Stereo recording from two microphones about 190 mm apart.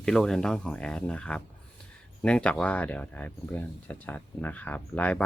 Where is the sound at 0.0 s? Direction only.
5° left (ahead or behind).